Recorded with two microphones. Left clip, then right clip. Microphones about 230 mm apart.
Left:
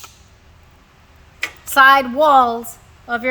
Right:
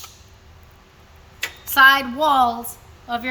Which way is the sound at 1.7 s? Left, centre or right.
Left.